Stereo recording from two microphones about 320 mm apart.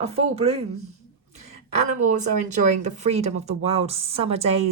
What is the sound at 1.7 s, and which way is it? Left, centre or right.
Speech, right.